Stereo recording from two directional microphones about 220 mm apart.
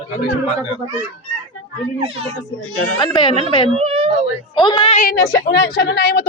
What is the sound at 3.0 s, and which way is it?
Speech, 20° left (ahead or behind).